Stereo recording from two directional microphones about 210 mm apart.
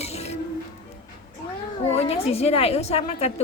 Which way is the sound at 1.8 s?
30° left (ahead or behind).